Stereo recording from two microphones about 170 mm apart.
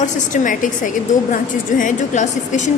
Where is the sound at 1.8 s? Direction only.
50° left (ahead or behind).